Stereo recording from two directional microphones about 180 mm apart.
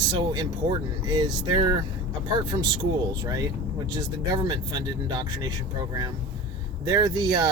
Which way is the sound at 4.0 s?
25° right (ahead or behind).